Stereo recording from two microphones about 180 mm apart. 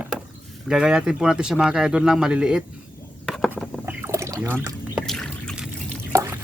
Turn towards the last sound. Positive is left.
turn(degrees=-15)  # may be behind; listen again after turning